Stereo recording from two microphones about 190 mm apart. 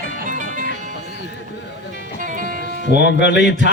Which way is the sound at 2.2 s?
45° right (ahead or behind).